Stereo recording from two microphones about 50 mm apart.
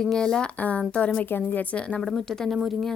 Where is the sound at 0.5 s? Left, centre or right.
Left.